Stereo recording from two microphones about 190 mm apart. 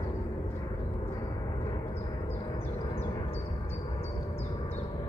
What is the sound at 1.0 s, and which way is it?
Gong, 20° left (ahead or behind).